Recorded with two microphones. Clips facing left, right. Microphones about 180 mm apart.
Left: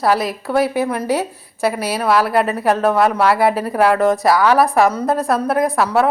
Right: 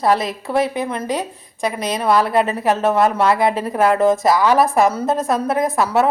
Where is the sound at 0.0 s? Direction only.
Centre (ahead or behind).